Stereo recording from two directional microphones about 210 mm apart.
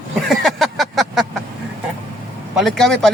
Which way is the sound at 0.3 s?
Centre (ahead or behind).